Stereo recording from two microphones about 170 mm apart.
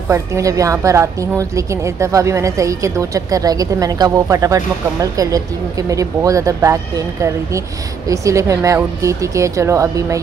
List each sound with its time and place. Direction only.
0.1 s a woman's voice: 20° right (ahead or behind)